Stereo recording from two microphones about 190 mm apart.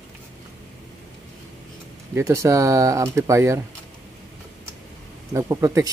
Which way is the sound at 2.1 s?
15° right (ahead or behind).